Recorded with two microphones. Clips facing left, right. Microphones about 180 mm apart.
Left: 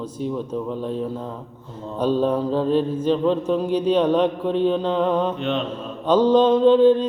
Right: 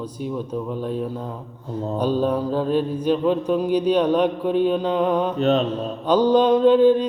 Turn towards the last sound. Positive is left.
turn(degrees=-10)  # may be behind; listen again after turning